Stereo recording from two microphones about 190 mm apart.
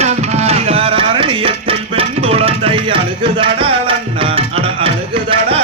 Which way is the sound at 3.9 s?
30° right (ahead or behind).